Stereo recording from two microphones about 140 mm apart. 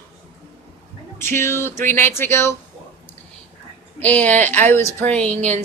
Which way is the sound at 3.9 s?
10° left (ahead or behind).